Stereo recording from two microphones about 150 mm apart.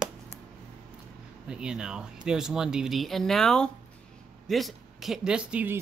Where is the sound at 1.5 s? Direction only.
5° right (ahead or behind).